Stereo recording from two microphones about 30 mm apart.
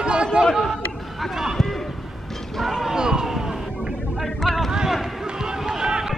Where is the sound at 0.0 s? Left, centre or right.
Right.